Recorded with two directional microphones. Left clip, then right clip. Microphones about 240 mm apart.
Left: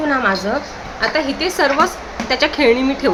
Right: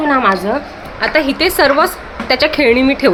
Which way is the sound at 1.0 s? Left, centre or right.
Right.